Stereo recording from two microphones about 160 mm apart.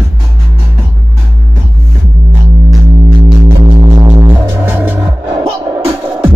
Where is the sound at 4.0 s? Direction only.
25° right (ahead or behind).